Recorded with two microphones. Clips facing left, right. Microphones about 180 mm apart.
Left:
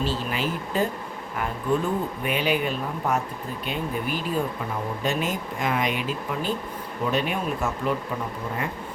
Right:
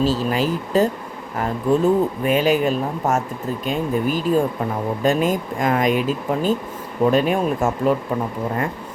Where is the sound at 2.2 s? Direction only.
45° right (ahead or behind).